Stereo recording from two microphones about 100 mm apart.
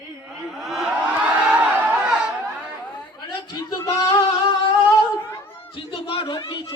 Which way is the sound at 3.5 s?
35° left (ahead or behind).